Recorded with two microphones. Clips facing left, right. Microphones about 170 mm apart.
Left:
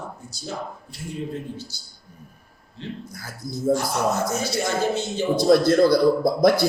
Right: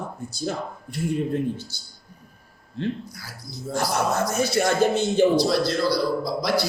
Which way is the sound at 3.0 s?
50° left (ahead or behind).